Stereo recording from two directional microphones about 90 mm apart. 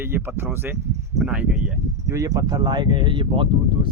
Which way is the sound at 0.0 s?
25° right (ahead or behind).